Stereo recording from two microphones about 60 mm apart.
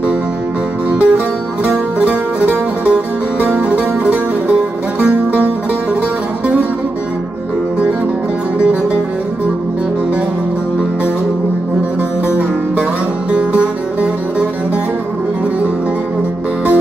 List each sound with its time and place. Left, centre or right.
0.9 s music: right
13.3 s music: centre